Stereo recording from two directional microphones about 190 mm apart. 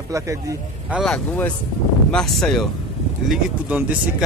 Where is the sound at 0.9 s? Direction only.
Centre (ahead or behind).